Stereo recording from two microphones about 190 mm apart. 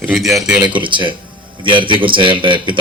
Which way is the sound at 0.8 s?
25° right (ahead or behind).